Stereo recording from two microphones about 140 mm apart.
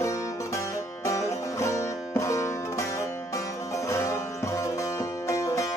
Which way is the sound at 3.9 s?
20° left (ahead or behind).